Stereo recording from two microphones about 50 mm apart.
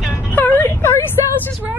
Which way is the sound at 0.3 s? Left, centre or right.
Left.